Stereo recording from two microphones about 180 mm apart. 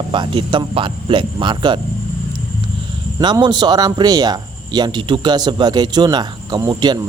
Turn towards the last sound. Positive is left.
turn(degrees=-25)  # may be behind; listen again after turning